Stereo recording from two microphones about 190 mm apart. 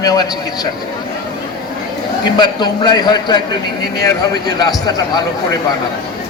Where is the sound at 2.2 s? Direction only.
20° left (ahead or behind).